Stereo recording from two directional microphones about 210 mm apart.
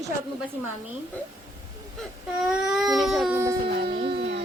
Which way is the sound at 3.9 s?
25° right (ahead or behind).